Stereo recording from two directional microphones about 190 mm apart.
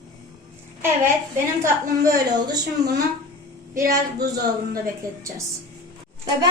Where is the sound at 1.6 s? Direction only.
15° right (ahead or behind).